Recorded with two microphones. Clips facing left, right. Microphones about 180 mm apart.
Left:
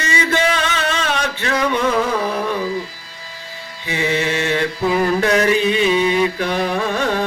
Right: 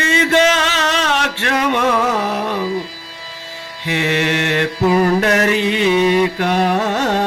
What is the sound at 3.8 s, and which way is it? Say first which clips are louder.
Mantra: right 2 dB; 70° right (ahead or behind).